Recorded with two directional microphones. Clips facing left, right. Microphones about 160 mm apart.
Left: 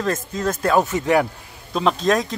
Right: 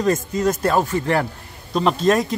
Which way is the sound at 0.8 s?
15° left (ahead or behind).